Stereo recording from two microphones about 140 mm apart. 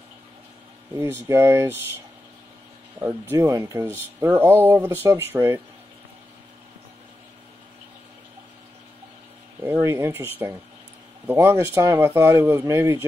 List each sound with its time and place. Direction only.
0.9 s speech: 15° right (ahead or behind)
3.0 s speech: 15° right (ahead or behind)
9.6 s speech: 15° right (ahead or behind)